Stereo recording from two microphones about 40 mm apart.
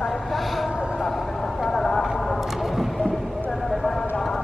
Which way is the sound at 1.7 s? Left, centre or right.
Centre.